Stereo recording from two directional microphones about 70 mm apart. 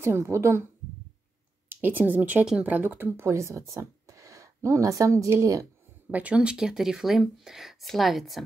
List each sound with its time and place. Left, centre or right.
0.0 s a woman's voice: right
1.7 s speech: right
3.2 s speech: right
6.1 s speech: centre